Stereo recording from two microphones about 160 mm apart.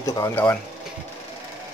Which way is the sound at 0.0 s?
20° left (ahead or behind).